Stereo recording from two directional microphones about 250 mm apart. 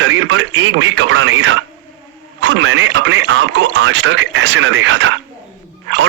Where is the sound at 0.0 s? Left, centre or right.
Right.